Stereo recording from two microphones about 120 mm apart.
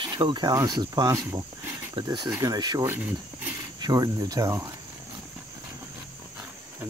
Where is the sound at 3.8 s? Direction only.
35° right (ahead or behind).